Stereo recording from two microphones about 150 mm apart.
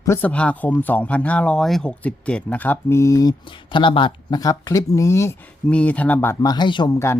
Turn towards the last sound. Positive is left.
turn(degrees=30)  # may be behind; listen again after turning